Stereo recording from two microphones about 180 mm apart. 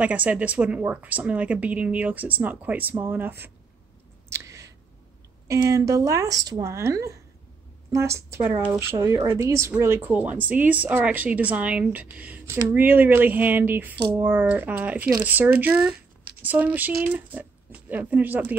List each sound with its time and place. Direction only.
0.0 s speech: 10° right (ahead or behind)
4.3 s a sound: 15° right (ahead or behind)
5.5 s speech: 15° right (ahead or behind)